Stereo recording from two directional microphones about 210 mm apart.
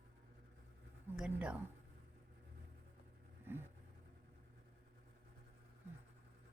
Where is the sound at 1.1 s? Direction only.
5° right (ahead or behind).